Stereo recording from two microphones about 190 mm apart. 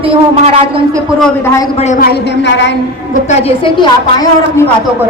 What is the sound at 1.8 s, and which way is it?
Speech, 40° left (ahead or behind).